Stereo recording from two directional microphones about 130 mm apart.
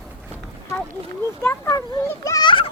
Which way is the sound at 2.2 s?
25° left (ahead or behind).